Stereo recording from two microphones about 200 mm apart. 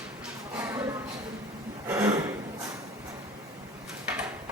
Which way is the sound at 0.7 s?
15° right (ahead or behind).